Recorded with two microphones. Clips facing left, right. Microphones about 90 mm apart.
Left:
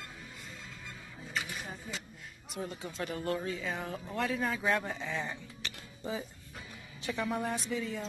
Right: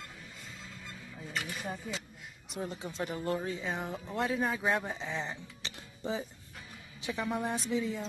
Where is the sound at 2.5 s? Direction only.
25° right (ahead or behind).